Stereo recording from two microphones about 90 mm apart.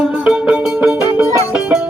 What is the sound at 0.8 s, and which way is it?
Music, 30° right (ahead or behind).